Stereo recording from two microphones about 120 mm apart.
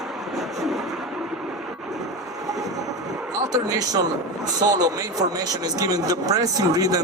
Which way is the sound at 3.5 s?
30° right (ahead or behind).